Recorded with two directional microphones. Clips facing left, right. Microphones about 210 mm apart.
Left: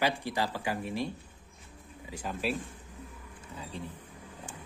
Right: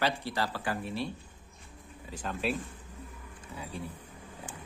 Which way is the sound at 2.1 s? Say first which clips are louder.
Even; 10° left (ahead or behind).